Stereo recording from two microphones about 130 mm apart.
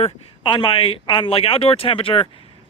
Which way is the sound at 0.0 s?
40° left (ahead or behind).